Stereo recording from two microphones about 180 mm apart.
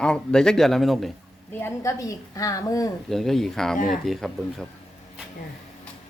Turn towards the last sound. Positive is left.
turn(degrees=0)  # may be behind; listen again after turning